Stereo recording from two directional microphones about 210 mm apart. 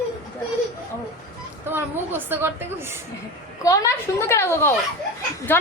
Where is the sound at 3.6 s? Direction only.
15° left (ahead or behind).